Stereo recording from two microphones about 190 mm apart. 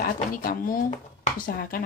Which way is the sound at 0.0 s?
45° left (ahead or behind).